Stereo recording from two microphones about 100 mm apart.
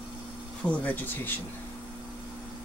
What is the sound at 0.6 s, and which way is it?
Speech, 15° left (ahead or behind).